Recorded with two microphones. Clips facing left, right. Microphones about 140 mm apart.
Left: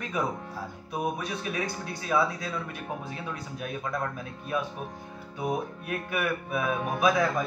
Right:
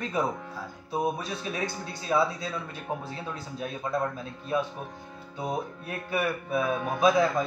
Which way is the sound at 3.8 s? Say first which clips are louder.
Right 4 dB; 25° right (ahead or behind).